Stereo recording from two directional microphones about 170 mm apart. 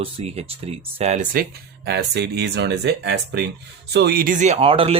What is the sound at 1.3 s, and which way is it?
Speech, 70° right (ahead or behind).